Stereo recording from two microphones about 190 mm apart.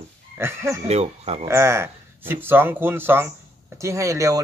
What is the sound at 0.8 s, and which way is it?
Speech, 35° right (ahead or behind).